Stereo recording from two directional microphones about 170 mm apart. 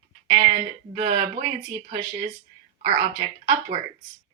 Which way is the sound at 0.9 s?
35° right (ahead or behind).